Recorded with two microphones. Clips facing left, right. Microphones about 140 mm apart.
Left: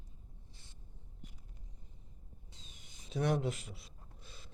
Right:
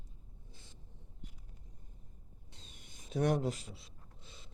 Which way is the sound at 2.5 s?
60° right (ahead or behind).